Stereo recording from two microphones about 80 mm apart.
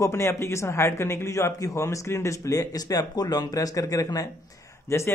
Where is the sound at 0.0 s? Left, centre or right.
Left.